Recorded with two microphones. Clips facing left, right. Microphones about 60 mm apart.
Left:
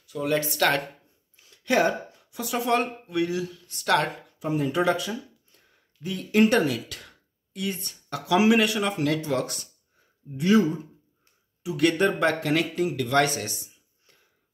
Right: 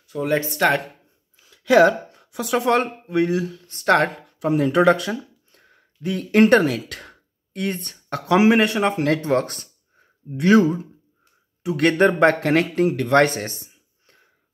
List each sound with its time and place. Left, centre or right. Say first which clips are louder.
0.0 s speech: right 4 dB; right
0.6 s speech: right 4 dB; centre
1.8 s speech: right 9 dB; right
3.1 s speech: right 6 dB; right
4.4 s speech: right 7 dB; right
10.3 s speech: right 5 dB; right